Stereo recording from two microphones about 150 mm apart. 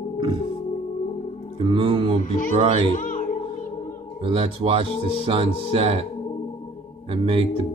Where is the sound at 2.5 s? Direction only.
45° right (ahead or behind).